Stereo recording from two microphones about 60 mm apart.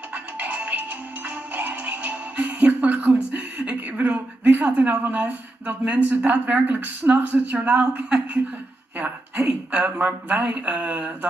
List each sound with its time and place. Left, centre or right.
0.4 s music: right
4.8 s speech: right
9.5 s speech: right
9.9 s speech: right